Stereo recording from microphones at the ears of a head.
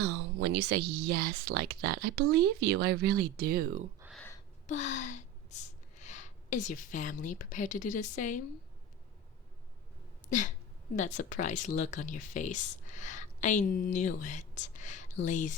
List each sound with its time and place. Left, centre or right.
0.0 s speech: right
4.4 s gasp: left
10.2 s speech: left